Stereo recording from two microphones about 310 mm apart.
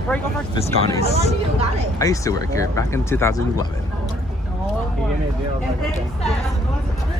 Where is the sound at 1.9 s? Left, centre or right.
Centre.